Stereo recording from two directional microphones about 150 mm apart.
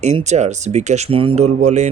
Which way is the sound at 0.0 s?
50° right (ahead or behind).